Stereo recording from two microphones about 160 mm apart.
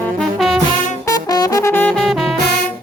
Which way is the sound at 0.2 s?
Centre (ahead or behind).